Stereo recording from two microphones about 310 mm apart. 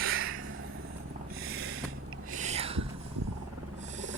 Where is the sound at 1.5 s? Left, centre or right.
Right.